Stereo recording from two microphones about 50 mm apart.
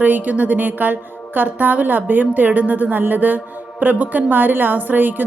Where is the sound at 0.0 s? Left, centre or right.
Right.